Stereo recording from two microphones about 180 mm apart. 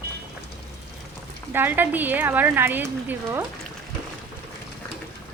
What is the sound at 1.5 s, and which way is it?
Speech, 10° right (ahead or behind).